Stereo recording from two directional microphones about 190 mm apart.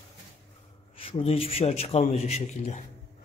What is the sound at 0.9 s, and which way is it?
A man's voice, 30° left (ahead or behind).